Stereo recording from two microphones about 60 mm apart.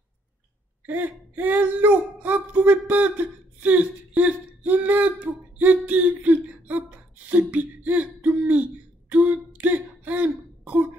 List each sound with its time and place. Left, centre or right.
0.8 s speech: right
9.1 s throat clearing: right